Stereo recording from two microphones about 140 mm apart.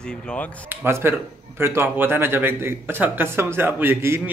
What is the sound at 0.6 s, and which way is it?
Speech, 15° right (ahead or behind).